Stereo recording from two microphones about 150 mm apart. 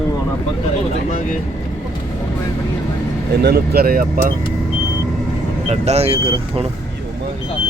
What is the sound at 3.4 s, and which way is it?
Speech, 90° right.